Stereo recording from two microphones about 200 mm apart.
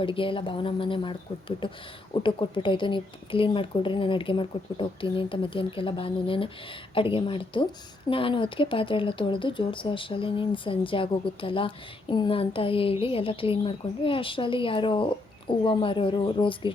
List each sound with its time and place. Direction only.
0.0 s speech: 25° left (ahead or behind)